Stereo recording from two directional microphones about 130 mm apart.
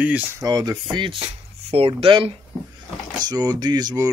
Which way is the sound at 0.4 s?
30° right (ahead or behind).